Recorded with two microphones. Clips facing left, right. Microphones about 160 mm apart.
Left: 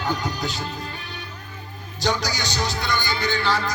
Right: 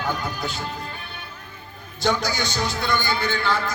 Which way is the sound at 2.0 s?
50° right (ahead or behind).